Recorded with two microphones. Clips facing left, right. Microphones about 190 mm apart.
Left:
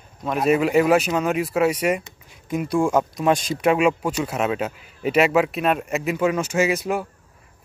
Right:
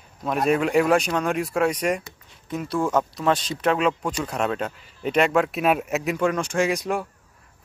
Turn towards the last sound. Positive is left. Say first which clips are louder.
# left 2 dB
turn(degrees=5)  # may be behind; listen again after turning